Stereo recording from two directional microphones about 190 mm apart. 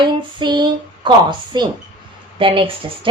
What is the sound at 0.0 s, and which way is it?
Speech, 25° right (ahead or behind).